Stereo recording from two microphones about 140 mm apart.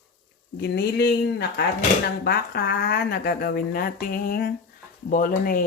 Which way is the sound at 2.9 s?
90° left.